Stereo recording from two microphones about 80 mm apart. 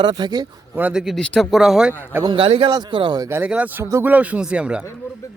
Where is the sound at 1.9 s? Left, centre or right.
Left.